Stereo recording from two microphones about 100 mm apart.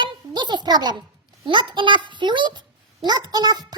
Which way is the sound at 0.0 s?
50° right (ahead or behind).